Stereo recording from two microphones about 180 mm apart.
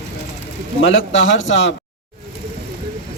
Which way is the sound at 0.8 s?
90° left.